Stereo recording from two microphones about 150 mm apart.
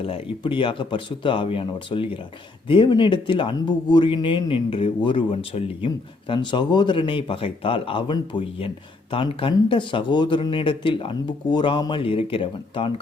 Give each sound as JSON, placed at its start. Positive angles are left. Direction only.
{"t": 0.0, "sound": "speech", "side_deg": 35}